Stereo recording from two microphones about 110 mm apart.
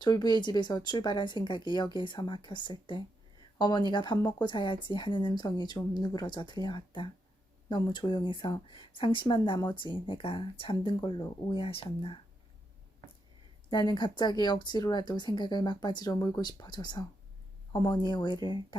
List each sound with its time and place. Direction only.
0.0 s a woman's voice: 40° left (ahead or behind)
11.6 s a woman's voice: 55° left (ahead or behind)
13.7 s a woman's voice: 45° left (ahead or behind)